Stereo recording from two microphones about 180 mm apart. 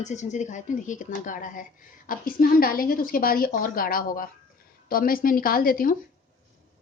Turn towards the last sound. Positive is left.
turn(degrees=50)  # may be behind; listen again after turning